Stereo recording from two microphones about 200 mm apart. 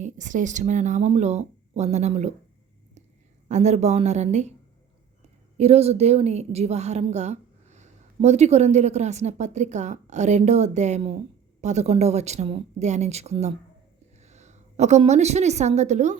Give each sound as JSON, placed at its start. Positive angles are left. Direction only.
{"t": 0.0, "sound": "a woman's voice", "side_deg": -40}
{"t": 3.5, "sound": "a woman's voice", "side_deg": -35}
{"t": 5.5, "sound": "a woman's voice", "side_deg": -30}